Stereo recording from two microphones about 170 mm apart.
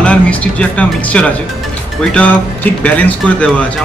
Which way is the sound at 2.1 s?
10° left (ahead or behind).